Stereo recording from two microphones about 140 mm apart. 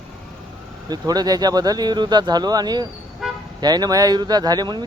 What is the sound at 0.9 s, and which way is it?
Speech, 30° right (ahead or behind).